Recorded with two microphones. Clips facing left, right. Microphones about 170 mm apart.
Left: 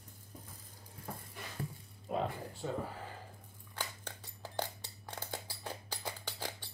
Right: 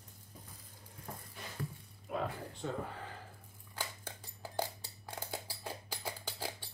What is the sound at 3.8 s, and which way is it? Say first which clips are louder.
Scissors: even; 10° right (ahead or behind).